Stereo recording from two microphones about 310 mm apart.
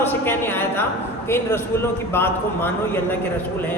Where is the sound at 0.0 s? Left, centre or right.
Centre.